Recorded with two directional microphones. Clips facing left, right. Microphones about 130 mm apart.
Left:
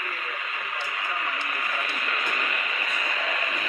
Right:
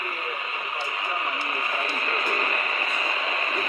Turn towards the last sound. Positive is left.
turn(degrees=-35)  # may be behind; listen again after turning